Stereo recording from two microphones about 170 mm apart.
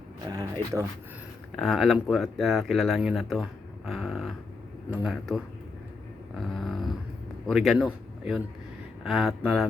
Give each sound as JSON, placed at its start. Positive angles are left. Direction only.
{"t": 0.3, "sound": "speech", "side_deg": -20}
{"t": 1.5, "sound": "speech", "side_deg": 0}
{"t": 6.3, "sound": "a sound", "side_deg": 0}
{"t": 7.4, "sound": "a man's voice", "side_deg": 0}